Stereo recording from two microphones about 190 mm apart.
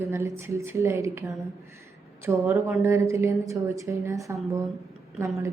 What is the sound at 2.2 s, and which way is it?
A woman's voice, 10° right (ahead or behind).